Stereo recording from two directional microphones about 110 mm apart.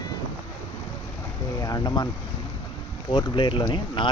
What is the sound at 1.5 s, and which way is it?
Speech, 35° left (ahead or behind).